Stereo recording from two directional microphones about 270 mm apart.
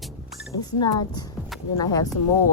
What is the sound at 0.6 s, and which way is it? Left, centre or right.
Speech, centre.